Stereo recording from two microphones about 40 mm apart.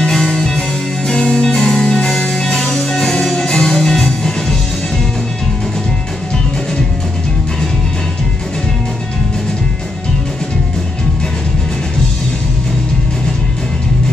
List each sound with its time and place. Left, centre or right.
0.0 s music: centre
2.2 s music: left